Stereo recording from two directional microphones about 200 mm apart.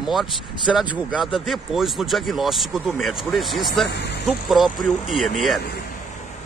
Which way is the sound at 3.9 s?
55° left (ahead or behind).